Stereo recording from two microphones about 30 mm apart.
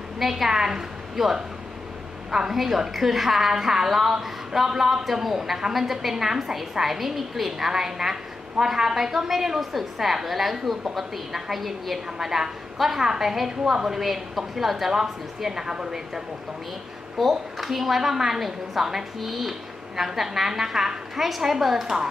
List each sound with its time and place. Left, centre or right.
0.2 s a woman's voice: centre
14.9 s a woman's voice: centre
17.2 s a woman's voice: centre